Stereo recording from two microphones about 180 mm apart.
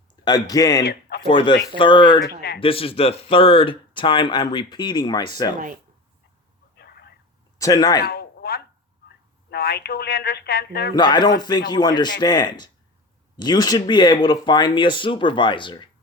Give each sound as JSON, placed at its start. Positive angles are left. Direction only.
{"t": 0.3, "sound": "speech", "side_deg": 20}
{"t": 6.7, "sound": "a sound", "side_deg": 65}
{"t": 7.6, "sound": "speech", "side_deg": 20}
{"t": 8.0, "sound": "a sound", "side_deg": 60}
{"t": 9.5, "sound": "speech", "side_deg": 65}
{"t": 10.9, "sound": "speech", "side_deg": 25}